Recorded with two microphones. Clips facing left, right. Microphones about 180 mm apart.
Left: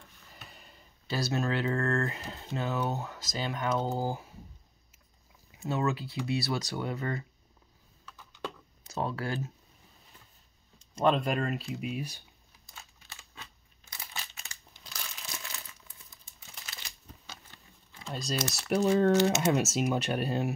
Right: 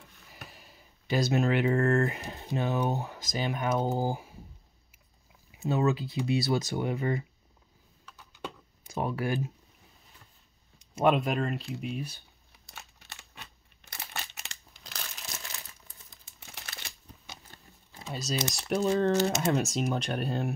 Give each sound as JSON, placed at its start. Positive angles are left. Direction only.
{"t": 0.5, "sound": "a sound", "side_deg": -5}
{"t": 1.0, "sound": "speech", "side_deg": -15}
{"t": 5.5, "sound": "speech", "side_deg": -20}
{"t": 8.8, "sound": "speech", "side_deg": -15}
{"t": 10.8, "sound": "speech", "side_deg": -10}
{"t": 12.6, "sound": "a sound", "side_deg": -70}
{"t": 16.3, "sound": "crumpling", "side_deg": -65}
{"t": 18.0, "sound": "speech", "side_deg": -5}